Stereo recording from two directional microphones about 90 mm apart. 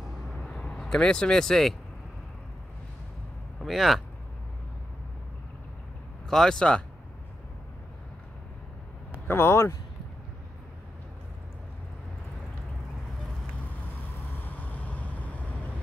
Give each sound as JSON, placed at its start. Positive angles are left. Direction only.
{"t": 0.4, "sound": "vehicle", "side_deg": 10}
{"t": 3.6, "sound": "speech", "side_deg": 0}
{"t": 6.2, "sound": "speech", "side_deg": 5}
{"t": 9.3, "sound": "speech", "side_deg": 30}
{"t": 14.4, "sound": "vehicle", "side_deg": 20}